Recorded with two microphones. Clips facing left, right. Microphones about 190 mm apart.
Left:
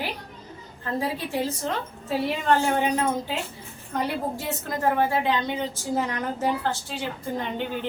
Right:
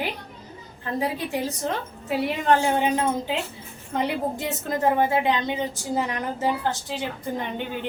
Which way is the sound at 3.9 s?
25° right (ahead or behind).